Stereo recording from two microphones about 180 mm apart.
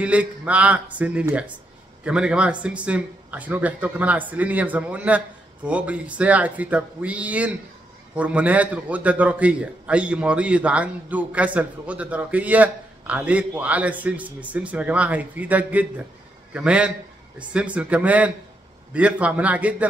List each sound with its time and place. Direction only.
0.0 s a man's voice: 5° right (ahead or behind)